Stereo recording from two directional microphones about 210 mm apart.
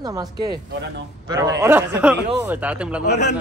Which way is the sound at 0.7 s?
55° right (ahead or behind).